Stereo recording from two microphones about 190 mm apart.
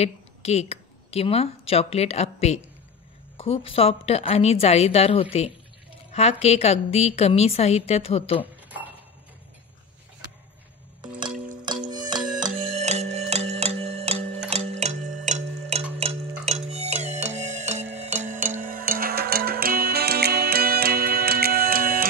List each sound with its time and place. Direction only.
0.0 s a woman's voice: 35° left (ahead or behind)
11.9 s music: 20° right (ahead or behind)
12.7 s music: 35° right (ahead or behind); by 22.0 s 50° right (ahead or behind)